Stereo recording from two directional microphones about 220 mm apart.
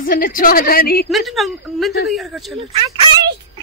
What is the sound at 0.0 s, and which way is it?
A woman's voice, 40° left (ahead or behind).